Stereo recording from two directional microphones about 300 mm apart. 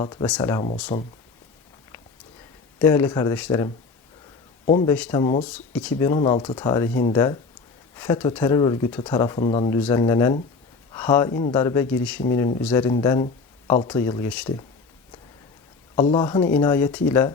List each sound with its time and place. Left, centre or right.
0.0 s speech: centre
2.7 s speech: centre
4.6 s a man's voice: left
4.9 s speech: centre
5.5 s speech: centre
16.0 s speech: centre